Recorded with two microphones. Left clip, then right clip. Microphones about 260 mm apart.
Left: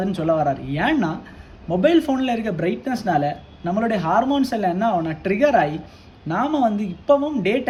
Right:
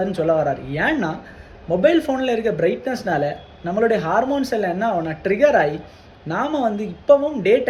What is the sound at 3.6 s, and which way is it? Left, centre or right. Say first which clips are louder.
Speech: right 3 dB; left.